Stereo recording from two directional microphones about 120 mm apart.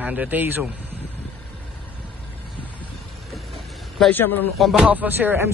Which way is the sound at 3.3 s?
Centre (ahead or behind).